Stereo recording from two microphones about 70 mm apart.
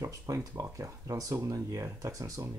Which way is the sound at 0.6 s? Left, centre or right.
Right.